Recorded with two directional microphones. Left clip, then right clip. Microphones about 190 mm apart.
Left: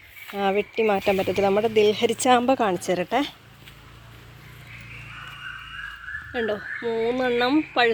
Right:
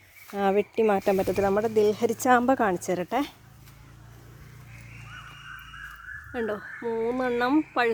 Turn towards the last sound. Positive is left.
turn(degrees=-10)  # may be behind; listen again after turning